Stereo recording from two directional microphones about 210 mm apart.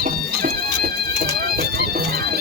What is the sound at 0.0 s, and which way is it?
Music, 45° right (ahead or behind).